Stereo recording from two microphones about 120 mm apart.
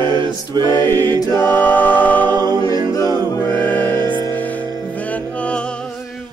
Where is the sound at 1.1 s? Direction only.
30° left (ahead or behind).